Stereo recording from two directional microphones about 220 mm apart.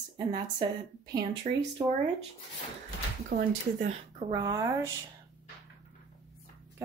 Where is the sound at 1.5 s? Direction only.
35° right (ahead or behind).